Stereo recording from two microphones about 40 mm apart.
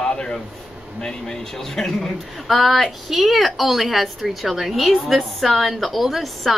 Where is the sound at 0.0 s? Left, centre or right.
Centre.